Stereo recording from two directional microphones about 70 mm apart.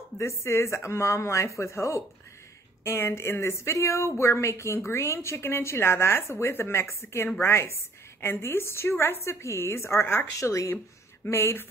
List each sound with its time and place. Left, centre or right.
0.2 s a woman's voice: left
10.4 s a woman's voice: left